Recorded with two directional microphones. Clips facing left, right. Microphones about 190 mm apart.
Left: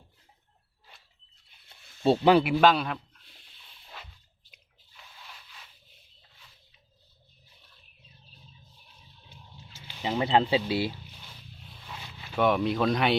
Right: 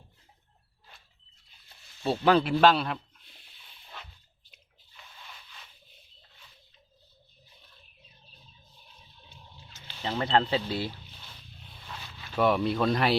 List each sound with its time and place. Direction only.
2.0 s speech: 15° left (ahead or behind)
2.4 s speech: 5° left (ahead or behind)
9.7 s a sound: 10° left (ahead or behind)
12.4 s speech: centre (ahead or behind)